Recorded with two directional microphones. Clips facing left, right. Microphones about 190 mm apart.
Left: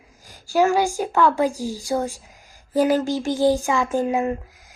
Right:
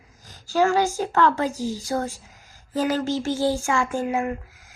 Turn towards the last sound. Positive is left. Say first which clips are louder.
# left 3 dB
turn(degrees=15)  # may be behind; listen again after turning